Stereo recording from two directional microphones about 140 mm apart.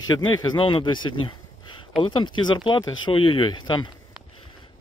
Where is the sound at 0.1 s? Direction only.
30° left (ahead or behind).